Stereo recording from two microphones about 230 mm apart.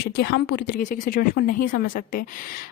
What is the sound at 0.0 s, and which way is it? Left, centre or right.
A woman's voice, left.